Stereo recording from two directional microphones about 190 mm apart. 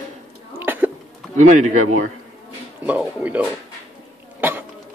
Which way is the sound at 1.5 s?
40° right (ahead or behind).